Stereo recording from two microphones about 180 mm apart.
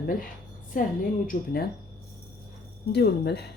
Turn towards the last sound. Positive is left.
turn(degrees=65)  # may be behind; listen again after turning